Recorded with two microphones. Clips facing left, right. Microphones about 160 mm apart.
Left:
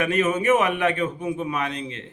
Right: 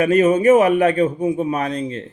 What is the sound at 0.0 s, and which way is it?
A man's voice, 35° right (ahead or behind).